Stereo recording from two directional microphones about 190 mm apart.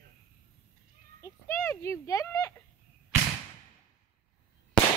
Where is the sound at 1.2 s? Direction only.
15° left (ahead or behind).